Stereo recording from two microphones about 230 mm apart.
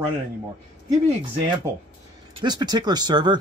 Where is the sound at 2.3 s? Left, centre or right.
Centre.